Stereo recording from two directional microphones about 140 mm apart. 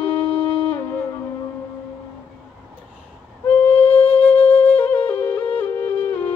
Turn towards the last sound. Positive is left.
turn(degrees=15)  # may be behind; listen again after turning